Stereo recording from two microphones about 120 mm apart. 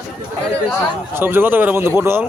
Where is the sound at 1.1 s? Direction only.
20° right (ahead or behind).